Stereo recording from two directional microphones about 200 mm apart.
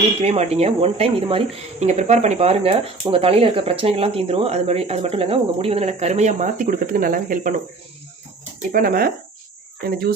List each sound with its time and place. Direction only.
0.2 s speech: 30° right (ahead or behind)
8.7 s speech: 45° right (ahead or behind)